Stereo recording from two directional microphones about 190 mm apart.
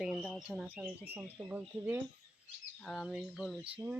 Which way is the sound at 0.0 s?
Centre (ahead or behind).